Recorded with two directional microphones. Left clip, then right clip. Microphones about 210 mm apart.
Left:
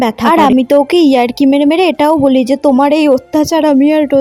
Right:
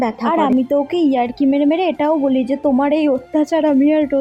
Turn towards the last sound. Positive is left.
turn(degrees=45)  # may be behind; listen again after turning